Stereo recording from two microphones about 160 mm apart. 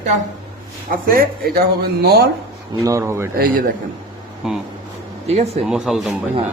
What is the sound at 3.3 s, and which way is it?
Speech, 65° right (ahead or behind).